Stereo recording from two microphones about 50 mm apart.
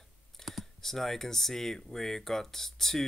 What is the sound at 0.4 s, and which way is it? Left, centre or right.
Speech, centre.